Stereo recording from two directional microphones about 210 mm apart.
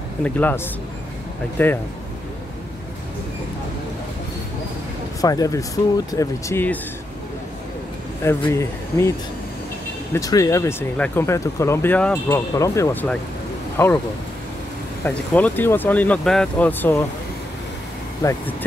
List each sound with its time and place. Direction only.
0.2 s speech: 10° left (ahead or behind)
1.6 s speech: 10° left (ahead or behind)
5.2 s speech: 15° left (ahead or behind)
8.2 s speech: 10° left (ahead or behind)
10.1 s speech: 15° left (ahead or behind)
15.0 s speech: 10° left (ahead or behind)
18.2 s speech: 15° left (ahead or behind)